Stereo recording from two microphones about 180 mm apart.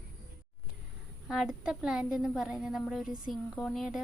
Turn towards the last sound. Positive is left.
turn(degrees=0)  # may be behind; listen again after turning